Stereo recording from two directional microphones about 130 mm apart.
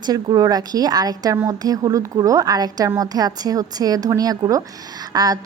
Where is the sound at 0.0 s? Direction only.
35° right (ahead or behind).